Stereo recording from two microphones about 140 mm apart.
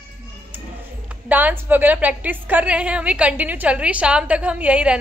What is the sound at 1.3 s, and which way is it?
A woman's voice, 10° right (ahead or behind).